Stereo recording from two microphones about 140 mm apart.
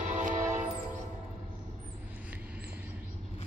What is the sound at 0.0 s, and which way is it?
Music, 65° right (ahead or behind).